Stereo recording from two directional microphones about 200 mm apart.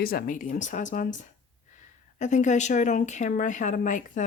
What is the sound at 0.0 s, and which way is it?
Speech, 50° left (ahead or behind).